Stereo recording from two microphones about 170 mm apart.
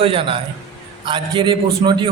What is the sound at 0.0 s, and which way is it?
A man's voice, 35° right (ahead or behind).